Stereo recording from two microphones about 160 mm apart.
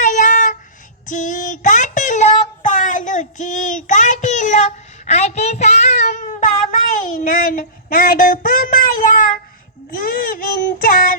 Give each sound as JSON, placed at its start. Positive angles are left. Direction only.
{"t": 0.0, "sound": "child singing", "side_deg": 50}